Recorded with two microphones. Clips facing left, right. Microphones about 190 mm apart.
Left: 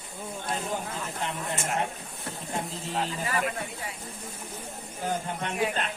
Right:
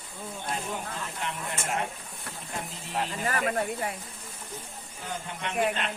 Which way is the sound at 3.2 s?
50° right (ahead or behind).